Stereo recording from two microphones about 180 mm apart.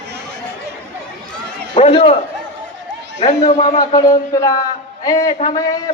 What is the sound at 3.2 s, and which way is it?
Speech, 40° left (ahead or behind).